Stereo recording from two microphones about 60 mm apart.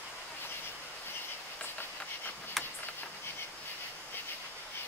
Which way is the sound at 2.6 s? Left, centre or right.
Centre.